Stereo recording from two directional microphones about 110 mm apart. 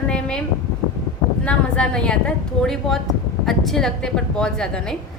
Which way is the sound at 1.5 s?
10° left (ahead or behind).